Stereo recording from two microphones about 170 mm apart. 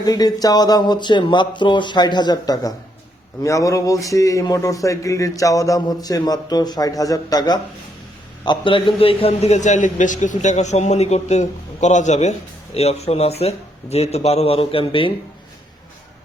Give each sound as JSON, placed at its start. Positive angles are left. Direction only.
{"t": 0.0, "sound": "a man's voice", "side_deg": 20}